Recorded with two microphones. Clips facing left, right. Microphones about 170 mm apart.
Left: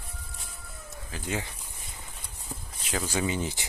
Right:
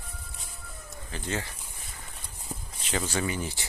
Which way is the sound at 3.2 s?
20° left (ahead or behind).